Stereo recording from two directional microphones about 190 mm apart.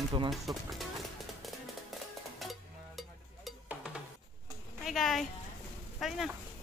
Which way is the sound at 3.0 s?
Centre (ahead or behind).